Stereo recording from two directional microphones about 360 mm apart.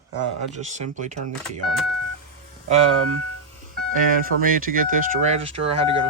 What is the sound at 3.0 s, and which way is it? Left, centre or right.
Speech, right.